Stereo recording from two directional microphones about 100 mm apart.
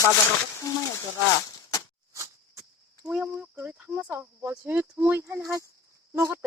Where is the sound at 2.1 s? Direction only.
30° right (ahead or behind).